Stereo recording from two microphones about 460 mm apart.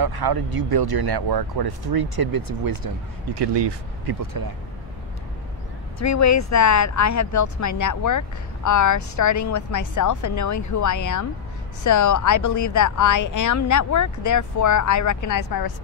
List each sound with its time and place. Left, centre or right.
0.0 s speech: right
3.3 s speech: right
5.9 s speech: left